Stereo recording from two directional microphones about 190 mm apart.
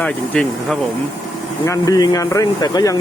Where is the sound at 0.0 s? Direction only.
5° left (ahead or behind).